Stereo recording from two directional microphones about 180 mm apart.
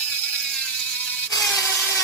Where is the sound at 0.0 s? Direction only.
10° left (ahead or behind).